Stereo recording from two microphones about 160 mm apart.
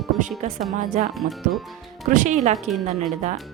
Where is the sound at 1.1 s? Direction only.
Centre (ahead or behind).